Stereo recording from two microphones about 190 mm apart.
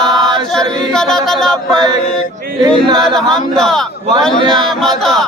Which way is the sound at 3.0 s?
5° left (ahead or behind).